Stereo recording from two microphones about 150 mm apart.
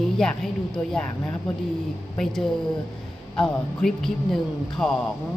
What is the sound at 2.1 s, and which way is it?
A man's voice, 5° left (ahead or behind).